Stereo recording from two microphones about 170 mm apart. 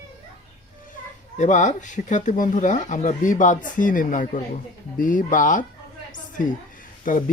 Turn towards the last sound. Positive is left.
turn(degrees=50)  # may be behind; listen again after turning